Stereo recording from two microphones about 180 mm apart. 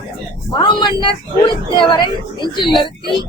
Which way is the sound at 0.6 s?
25° left (ahead or behind).